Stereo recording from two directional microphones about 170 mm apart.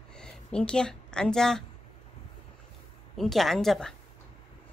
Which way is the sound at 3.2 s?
Centre (ahead or behind).